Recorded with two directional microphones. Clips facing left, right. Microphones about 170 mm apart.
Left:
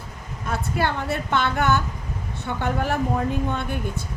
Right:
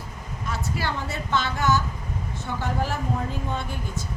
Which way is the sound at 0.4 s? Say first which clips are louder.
Left 5 dB; 55° left (ahead or behind).